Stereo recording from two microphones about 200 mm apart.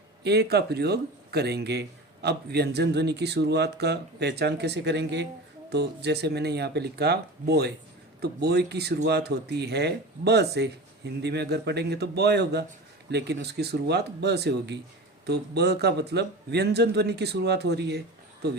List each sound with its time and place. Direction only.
0.3 s a man's voice: 55° right (ahead or behind)